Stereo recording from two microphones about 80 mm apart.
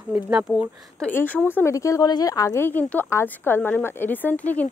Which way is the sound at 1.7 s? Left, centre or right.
Left.